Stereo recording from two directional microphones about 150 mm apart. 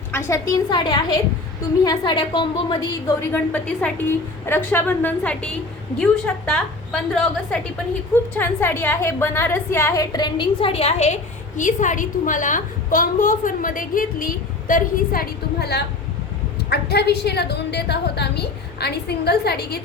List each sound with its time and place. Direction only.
0.1 s a woman's voice: 15° left (ahead or behind)
0.7 s a woman's voice: 30° left (ahead or behind)
3.2 s a woman's voice: 15° left (ahead or behind); by 19.8 s 90° left